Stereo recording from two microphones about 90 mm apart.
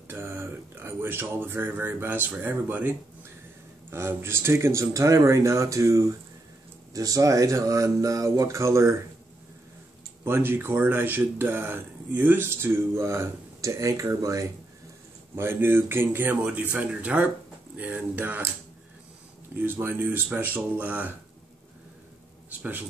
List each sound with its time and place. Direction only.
0.1 s speech: 25° right (ahead or behind)
10.2 s speech: 25° right (ahead or behind)
15.3 s speech: 25° right (ahead or behind)
19.6 s speech: 25° right (ahead or behind)
22.5 s speech: 20° right (ahead or behind)